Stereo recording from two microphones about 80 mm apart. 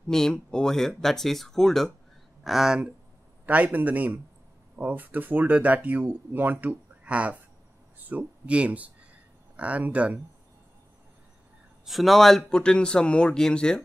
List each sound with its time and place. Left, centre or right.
0.1 s speech: centre
3.4 s speech: centre
11.8 s speech: centre